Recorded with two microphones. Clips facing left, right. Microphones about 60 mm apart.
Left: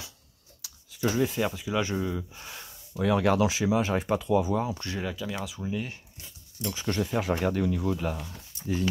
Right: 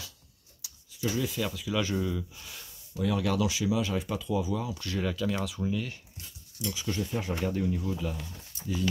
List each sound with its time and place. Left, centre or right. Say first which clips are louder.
0.9 s speech: left 4 dB; left
1.2 s speech: left 5 dB; left
2.3 s speech: left 4 dB; left
3.0 s speech: left 5 dB; left
5.0 s speech: right 5 dB; centre
5.7 s speech: even; left
6.6 s speech: left 1 dB; left
6.9 s speech: left 6 dB; left